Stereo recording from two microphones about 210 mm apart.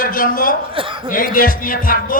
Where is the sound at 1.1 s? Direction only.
40° left (ahead or behind).